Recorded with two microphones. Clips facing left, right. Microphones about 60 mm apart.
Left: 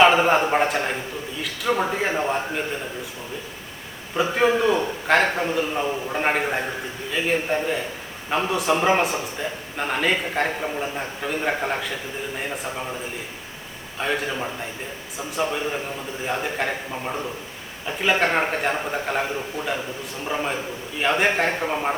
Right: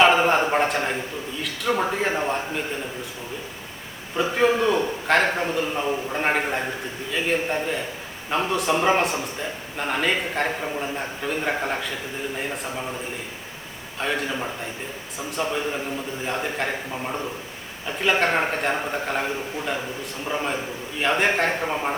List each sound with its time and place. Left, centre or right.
0.0 s a man's voice: centre
4.2 s a man's voice: centre
14.0 s a man's voice: centre
16.2 s a man's voice: centre